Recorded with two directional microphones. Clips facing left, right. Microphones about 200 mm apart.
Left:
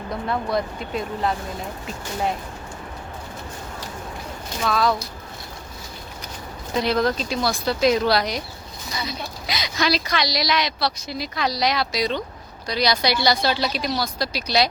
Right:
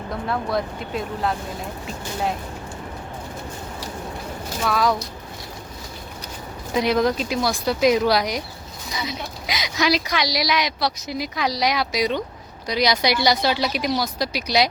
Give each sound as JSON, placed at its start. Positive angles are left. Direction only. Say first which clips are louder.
{"t": 0.1, "sound": "speech", "louder": "even", "side_deg": 0}
{"t": 4.6, "sound": "speech", "louder": "even", "side_deg": -10}
{"t": 6.7, "sound": "speech", "louder": "right 2 dB", "side_deg": -15}